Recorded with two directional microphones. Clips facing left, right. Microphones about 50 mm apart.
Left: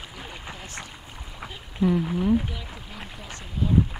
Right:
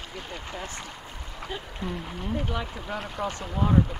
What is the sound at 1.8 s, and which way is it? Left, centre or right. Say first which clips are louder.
Speech: left 14 dB; centre.